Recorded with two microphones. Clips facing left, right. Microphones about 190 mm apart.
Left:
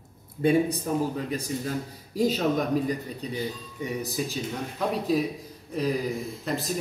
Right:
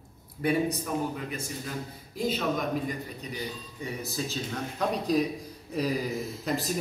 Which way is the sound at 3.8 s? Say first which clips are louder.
Left 4 dB; 15° left (ahead or behind).